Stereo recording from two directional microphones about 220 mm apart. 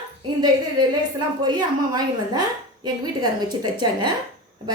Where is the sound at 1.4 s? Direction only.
20° right (ahead or behind).